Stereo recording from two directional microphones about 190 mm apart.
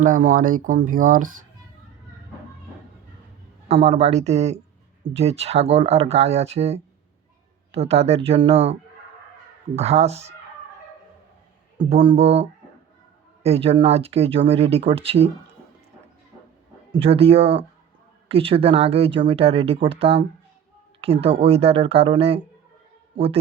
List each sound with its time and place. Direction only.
0.0 s speech: 45° right (ahead or behind)
3.8 s speech: 35° right (ahead or behind)
9.7 s speech: 35° right (ahead or behind)
11.8 s speech: 30° right (ahead or behind)
16.9 s a man's voice: 30° right (ahead or behind)